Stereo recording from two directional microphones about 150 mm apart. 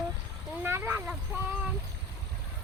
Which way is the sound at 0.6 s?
15° right (ahead or behind).